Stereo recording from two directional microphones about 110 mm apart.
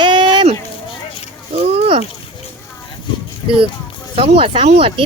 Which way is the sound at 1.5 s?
65° right (ahead or behind).